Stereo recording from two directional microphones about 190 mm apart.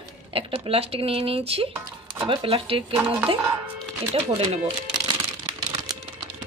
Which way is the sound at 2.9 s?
5° right (ahead or behind).